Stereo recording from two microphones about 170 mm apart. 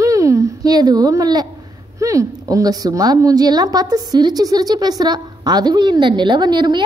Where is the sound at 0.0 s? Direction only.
20° right (ahead or behind).